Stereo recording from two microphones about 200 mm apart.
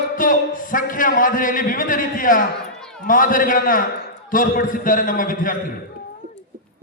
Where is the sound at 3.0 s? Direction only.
45° left (ahead or behind).